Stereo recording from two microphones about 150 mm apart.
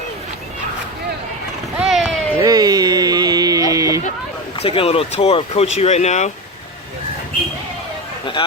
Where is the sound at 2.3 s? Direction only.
25° right (ahead or behind).